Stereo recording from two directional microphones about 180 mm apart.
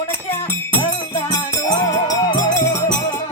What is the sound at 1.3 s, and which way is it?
Music, 20° left (ahead or behind).